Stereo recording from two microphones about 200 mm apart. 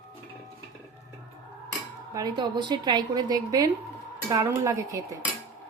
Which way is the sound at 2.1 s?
20° right (ahead or behind).